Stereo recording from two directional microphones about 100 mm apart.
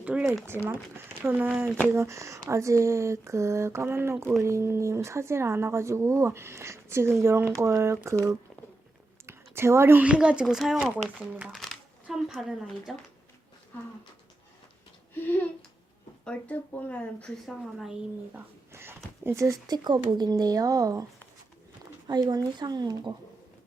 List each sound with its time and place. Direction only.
0.0 s a sound: 10° right (ahead or behind)
0.6 s speech: 25° right (ahead or behind)
1.9 s speech: 30° right (ahead or behind)
9.2 s speech: 25° right (ahead or behind); by 10.9 s 5° right (ahead or behind)
10.9 s speech: 15° right (ahead or behind)
11.5 s a sound: centre (ahead or behind)
12.3 s speech: 5° right (ahead or behind)
15.1 s speech: 20° left (ahead or behind)
17.4 s speech: centre (ahead or behind)
18.3 s speech: 25° right (ahead or behind); by 23.1 s 45° right (ahead or behind)